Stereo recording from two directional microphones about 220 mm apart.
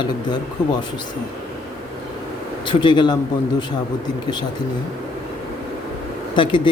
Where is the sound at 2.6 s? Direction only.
20° left (ahead or behind).